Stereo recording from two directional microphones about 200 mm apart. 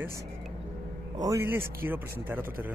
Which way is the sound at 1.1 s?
15° right (ahead or behind).